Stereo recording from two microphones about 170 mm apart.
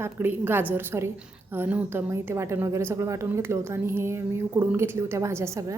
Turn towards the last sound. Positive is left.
turn(degrees=-15)  # may be behind; listen again after turning